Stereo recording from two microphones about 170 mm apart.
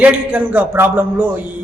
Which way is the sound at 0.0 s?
10° right (ahead or behind).